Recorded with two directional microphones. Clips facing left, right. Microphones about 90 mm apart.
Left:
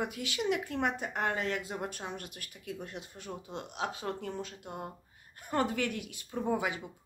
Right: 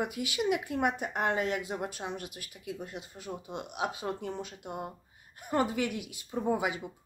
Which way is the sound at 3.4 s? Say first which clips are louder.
Right 2 dB; 15° right (ahead or behind).